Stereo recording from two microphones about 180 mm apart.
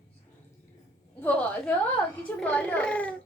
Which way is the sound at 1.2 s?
10° left (ahead or behind).